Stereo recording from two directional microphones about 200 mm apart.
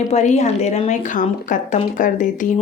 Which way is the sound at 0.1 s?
35° left (ahead or behind).